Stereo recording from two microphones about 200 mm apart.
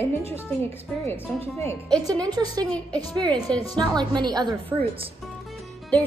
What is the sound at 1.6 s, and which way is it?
A woman's voice, 10° left (ahead or behind).